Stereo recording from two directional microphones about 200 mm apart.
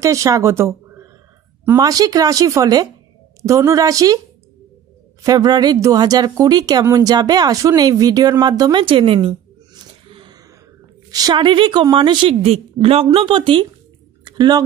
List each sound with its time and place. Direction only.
0.0 s a woman's voice: 15° right (ahead or behind)
5.2 s a woman's voice: 20° right (ahead or behind)
14.2 s a sound: 20° right (ahead or behind)